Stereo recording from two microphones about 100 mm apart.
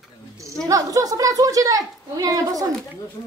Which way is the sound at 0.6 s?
35° right (ahead or behind).